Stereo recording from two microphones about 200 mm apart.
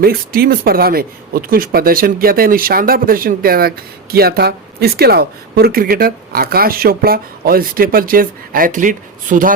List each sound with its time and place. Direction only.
0.0 s speech: 50° right (ahead or behind)